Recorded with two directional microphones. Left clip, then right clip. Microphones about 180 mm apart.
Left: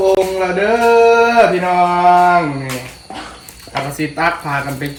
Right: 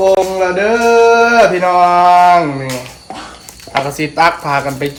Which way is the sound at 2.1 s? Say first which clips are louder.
Right 3 dB; 20° right (ahead or behind).